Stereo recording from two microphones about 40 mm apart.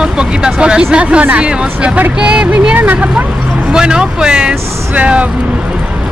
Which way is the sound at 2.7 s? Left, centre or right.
Right.